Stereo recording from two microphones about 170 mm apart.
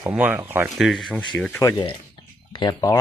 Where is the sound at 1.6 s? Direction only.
20° left (ahead or behind).